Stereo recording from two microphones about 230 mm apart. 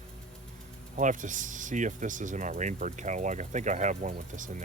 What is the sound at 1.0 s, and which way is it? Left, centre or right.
Speech, right.